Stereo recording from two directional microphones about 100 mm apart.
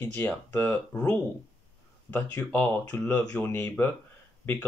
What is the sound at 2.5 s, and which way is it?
Speech, 20° left (ahead or behind).